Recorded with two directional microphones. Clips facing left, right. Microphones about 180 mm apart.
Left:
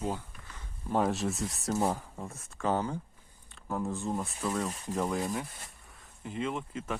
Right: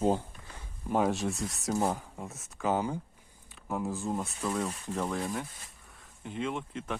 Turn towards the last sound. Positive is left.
turn(degrees=5)  # may be behind; listen again after turning